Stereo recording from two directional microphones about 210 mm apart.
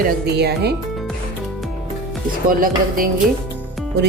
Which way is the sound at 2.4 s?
40° right (ahead or behind).